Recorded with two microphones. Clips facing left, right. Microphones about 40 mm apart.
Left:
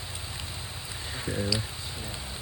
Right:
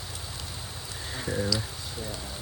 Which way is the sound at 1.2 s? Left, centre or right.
Centre.